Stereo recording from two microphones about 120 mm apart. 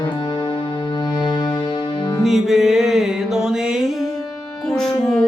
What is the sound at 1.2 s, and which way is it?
Music, 40° left (ahead or behind).